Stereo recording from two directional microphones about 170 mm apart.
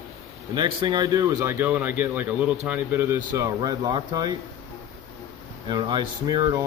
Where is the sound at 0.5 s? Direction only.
25° right (ahead or behind).